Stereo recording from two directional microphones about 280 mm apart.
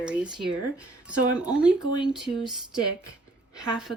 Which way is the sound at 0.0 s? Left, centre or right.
Centre.